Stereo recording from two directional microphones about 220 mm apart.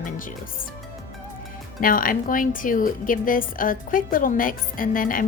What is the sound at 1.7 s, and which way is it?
Speech, 40° left (ahead or behind).